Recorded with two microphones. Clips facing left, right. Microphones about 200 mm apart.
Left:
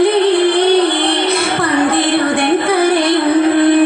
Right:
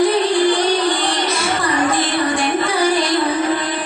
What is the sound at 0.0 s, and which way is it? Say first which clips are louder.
Music: left 4 dB; 60° left (ahead or behind).